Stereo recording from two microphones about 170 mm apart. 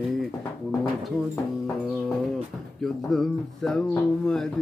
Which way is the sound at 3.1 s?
Centre (ahead or behind).